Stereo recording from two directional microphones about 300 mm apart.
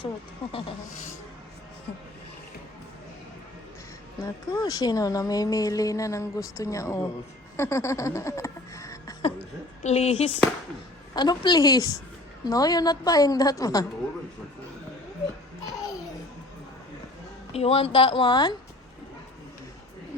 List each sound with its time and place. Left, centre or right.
4.2 s speech: centre
7.5 s a sound: centre
9.8 s speech: left
17.5 s speech: centre